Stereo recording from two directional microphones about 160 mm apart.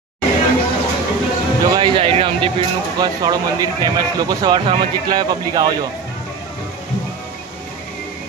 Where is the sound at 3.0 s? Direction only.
25° right (ahead or behind).